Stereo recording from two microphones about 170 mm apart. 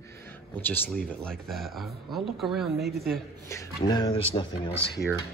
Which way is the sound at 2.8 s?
70° right (ahead or behind).